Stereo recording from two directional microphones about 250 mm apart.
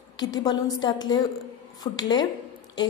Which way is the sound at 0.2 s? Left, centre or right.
Centre.